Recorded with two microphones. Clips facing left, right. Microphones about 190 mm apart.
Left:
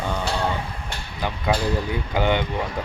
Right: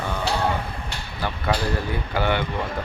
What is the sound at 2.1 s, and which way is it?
Speech, 20° left (ahead or behind).